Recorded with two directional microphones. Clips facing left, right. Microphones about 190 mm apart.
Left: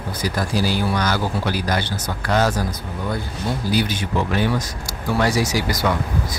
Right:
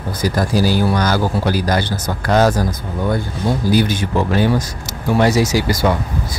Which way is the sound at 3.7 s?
45° right (ahead or behind).